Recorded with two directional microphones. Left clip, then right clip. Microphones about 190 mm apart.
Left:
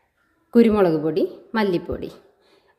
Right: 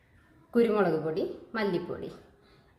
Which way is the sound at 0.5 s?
50° left (ahead or behind).